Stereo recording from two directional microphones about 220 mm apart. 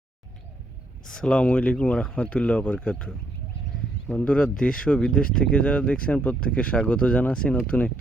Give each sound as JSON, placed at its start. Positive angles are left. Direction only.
{"t": 1.1, "sound": "speech", "side_deg": 5}
{"t": 4.1, "sound": "speech", "side_deg": 5}